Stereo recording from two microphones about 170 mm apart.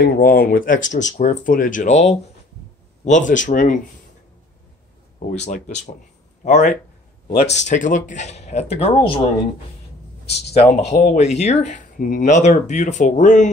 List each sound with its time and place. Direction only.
0.0 s speech: 60° left (ahead or behind)
5.3 s speech: 40° left (ahead or behind)
7.2 s speech: 60° left (ahead or behind)
7.5 s speech: 45° left (ahead or behind)
10.3 s speech: 40° left (ahead or behind)